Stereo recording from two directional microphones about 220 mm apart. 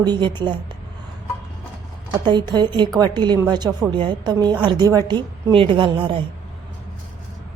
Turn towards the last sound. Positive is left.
turn(degrees=-25)  # may be behind; listen again after turning